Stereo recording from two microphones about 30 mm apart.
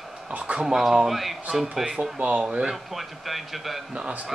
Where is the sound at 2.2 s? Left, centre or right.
Right.